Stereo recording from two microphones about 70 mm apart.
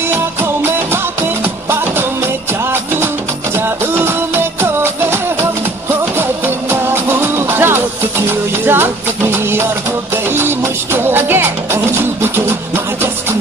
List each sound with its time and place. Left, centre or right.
0.1 s music: right